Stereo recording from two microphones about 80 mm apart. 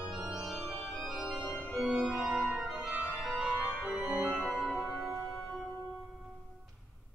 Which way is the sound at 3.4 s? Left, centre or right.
Centre.